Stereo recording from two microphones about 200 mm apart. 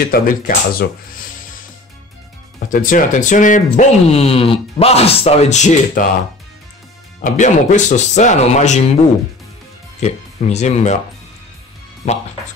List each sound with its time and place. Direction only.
0.1 s speech: 50° left (ahead or behind)
2.7 s speech: 40° left (ahead or behind)
7.2 s speech: 40° left (ahead or behind)
9.9 s speech: 35° left (ahead or behind)
12.0 s speech: 35° left (ahead or behind)